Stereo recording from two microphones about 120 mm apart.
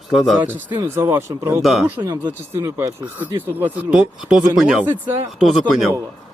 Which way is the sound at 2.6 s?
25° right (ahead or behind).